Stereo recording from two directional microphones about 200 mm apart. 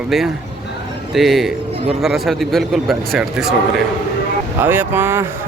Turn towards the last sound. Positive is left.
turn(degrees=-10)  # may be behind; listen again after turning